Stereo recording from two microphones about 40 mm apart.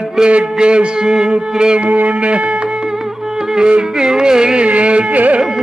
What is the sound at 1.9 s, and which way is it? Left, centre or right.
Speech, right.